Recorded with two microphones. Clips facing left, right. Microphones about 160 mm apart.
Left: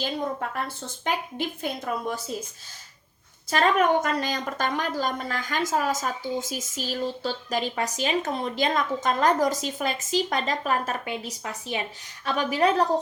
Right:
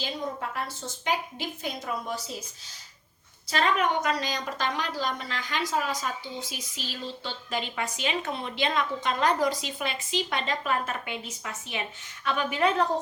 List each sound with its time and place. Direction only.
0.0 s a woman's voice: 50° left (ahead or behind)
3.5 s a woman's voice: 45° left (ahead or behind)